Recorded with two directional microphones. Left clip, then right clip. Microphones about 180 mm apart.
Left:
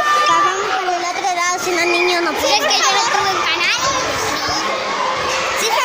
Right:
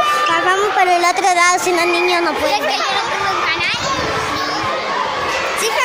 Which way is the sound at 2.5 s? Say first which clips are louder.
Left 2 dB; 20° left (ahead or behind).